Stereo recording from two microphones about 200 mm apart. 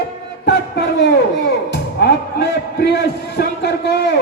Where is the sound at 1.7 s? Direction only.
55° left (ahead or behind).